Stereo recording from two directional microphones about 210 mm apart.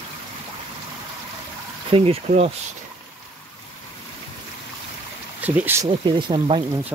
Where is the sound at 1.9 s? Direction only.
30° right (ahead or behind).